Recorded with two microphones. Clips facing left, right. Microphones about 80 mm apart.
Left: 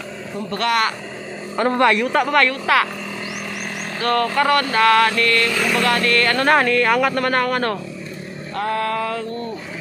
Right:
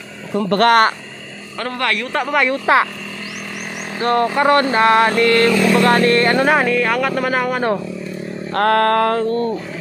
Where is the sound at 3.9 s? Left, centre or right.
Right.